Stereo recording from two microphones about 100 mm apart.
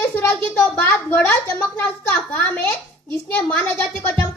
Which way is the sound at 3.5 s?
15° left (ahead or behind).